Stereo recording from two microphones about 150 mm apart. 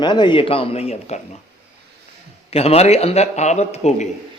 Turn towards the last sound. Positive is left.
turn(degrees=45)  # may be behind; listen again after turning